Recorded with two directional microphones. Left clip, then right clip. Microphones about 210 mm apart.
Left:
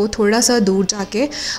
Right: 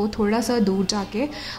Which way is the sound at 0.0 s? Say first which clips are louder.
Left 7 dB; 20° left (ahead or behind).